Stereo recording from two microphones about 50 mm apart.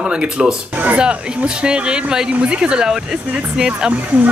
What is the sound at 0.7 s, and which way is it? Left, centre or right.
Speech, right.